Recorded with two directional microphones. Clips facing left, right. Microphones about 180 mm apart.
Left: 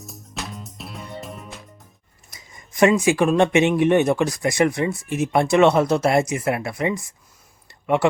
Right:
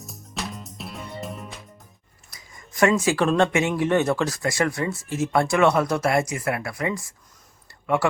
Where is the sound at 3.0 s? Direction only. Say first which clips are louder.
Left 3 dB; 15° left (ahead or behind).